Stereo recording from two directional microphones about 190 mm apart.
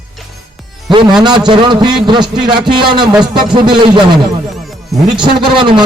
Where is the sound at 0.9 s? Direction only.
25° right (ahead or behind).